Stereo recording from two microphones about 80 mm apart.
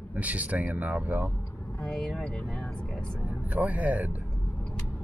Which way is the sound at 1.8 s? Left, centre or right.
Centre.